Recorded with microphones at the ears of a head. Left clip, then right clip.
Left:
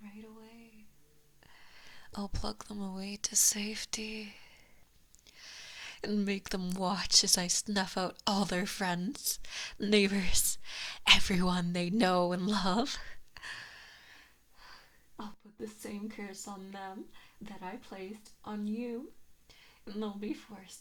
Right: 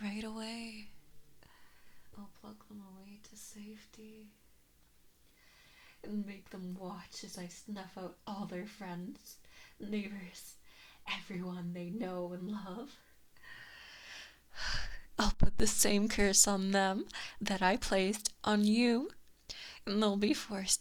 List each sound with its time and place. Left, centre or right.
0.0 s a sound: right
2.1 s speech: left
5.4 s speech: left
14.1 s speech: right